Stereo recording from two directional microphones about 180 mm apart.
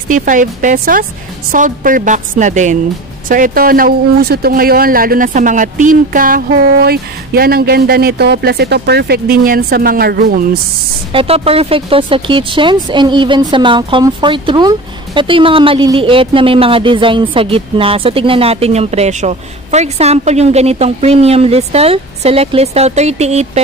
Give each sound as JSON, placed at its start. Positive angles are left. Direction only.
{"t": 0.1, "sound": "a woman's voice", "side_deg": -45}
{"t": 11.1, "sound": "speech", "side_deg": -30}